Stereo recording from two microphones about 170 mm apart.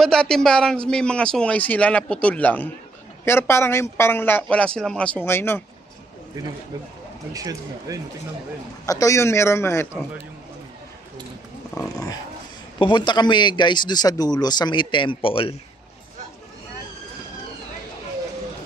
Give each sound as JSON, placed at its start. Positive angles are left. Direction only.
{"t": 0.0, "sound": "a man's voice", "side_deg": 5}
{"t": 7.3, "sound": "speech", "side_deg": -20}
{"t": 8.8, "sound": "a man's voice", "side_deg": 20}
{"t": 11.7, "sound": "a man's voice", "side_deg": 20}